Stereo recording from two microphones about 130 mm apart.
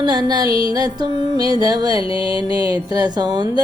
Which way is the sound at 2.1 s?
40° left (ahead or behind).